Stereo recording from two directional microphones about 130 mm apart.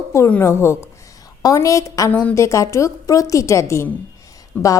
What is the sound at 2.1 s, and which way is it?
A woman's voice, 15° left (ahead or behind).